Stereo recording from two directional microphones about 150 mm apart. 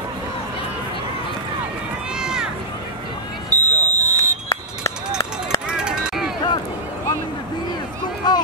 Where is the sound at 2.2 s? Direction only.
5° right (ahead or behind).